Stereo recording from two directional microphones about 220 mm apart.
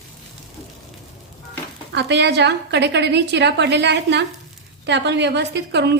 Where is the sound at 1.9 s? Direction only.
50° right (ahead or behind).